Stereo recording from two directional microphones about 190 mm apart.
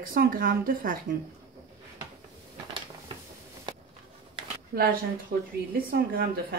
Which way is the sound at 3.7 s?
25° right (ahead or behind).